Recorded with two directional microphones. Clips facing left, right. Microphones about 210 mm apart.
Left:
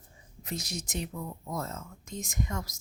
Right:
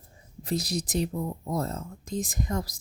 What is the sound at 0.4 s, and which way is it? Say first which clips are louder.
Speech: right 8 dB; 35° right (ahead or behind).